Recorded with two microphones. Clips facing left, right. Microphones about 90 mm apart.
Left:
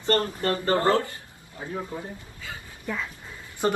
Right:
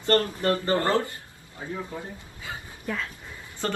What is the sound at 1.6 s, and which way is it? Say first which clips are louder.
Speech: left 1 dB; 20° left (ahead or behind).